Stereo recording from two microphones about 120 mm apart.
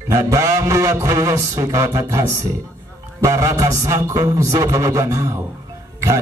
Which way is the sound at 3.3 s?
30° right (ahead or behind).